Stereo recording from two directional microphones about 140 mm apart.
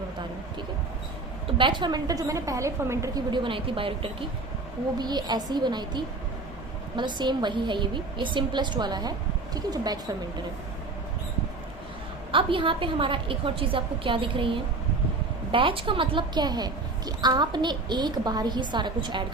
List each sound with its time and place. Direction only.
1.5 s a woman's voice: 35° right (ahead or behind)
12.3 s a woman's voice: 40° right (ahead or behind)